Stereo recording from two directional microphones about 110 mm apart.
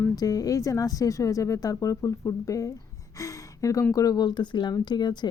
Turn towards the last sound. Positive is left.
turn(degrees=40)  # may be behind; listen again after turning